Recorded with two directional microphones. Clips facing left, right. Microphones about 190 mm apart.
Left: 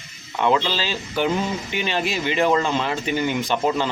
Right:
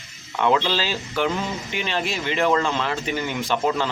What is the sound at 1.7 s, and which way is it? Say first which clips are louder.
Speech: left 2 dB; 5° left (ahead or behind).